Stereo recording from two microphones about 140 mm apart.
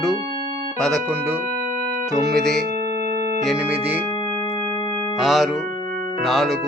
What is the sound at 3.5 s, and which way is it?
Speech, 10° right (ahead or behind).